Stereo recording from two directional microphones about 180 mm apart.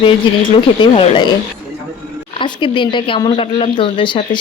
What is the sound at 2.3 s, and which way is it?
Speech, 25° left (ahead or behind).